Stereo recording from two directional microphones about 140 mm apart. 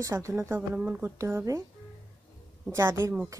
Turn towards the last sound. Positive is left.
turn(degrees=-15)  # may be behind; listen again after turning